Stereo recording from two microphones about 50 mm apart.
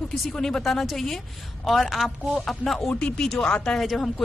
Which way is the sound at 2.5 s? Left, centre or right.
Centre.